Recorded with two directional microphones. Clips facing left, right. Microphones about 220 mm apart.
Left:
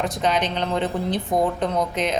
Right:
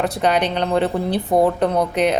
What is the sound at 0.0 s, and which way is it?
A woman's voice, 65° right (ahead or behind).